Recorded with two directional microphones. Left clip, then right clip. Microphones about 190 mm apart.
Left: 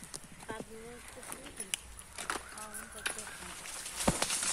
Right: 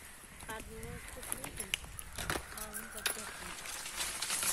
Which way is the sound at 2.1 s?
30° right (ahead or behind).